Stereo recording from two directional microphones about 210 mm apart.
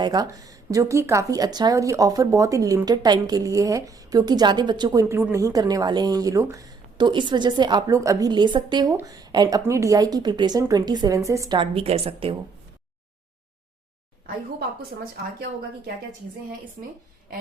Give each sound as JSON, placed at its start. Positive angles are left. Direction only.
{"t": 0.0, "sound": "a woman's voice", "side_deg": -20}